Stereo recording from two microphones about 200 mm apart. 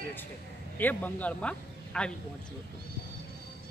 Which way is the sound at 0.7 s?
10° left (ahead or behind).